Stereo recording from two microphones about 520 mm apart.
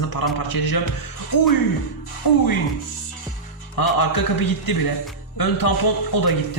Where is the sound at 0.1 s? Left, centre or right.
Left.